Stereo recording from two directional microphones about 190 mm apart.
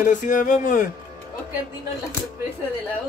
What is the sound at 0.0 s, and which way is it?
Speech, 45° left (ahead or behind).